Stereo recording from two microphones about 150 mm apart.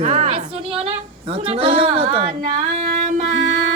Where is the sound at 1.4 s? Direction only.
35° right (ahead or behind).